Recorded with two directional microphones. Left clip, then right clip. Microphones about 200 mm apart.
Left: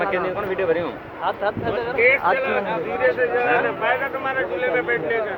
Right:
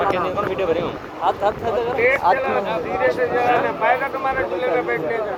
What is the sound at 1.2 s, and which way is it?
Speech, 45° right (ahead or behind).